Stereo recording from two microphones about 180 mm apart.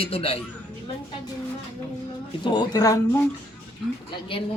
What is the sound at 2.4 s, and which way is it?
Speech, 25° left (ahead or behind).